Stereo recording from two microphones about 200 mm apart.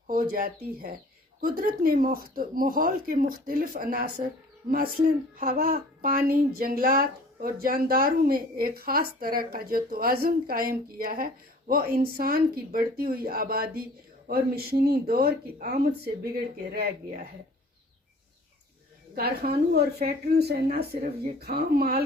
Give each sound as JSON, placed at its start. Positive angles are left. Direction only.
{"t": 0.1, "sound": "speech", "side_deg": -45}
{"t": 19.1, "sound": "speech", "side_deg": -50}